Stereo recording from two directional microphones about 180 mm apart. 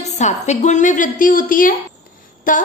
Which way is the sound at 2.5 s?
45° left (ahead or behind).